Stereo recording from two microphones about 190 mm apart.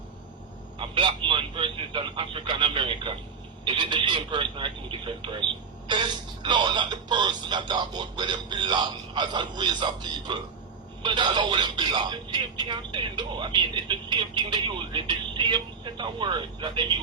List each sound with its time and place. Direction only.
0.8 s speech: 25° right (ahead or behind)